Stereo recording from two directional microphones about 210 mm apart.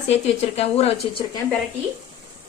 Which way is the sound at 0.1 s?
30° left (ahead or behind).